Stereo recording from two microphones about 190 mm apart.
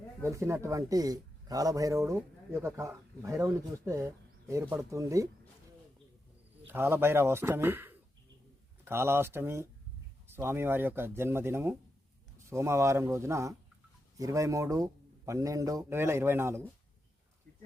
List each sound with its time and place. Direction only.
0.2 s speech: 15° right (ahead or behind)
6.7 s speech: 10° right (ahead or behind)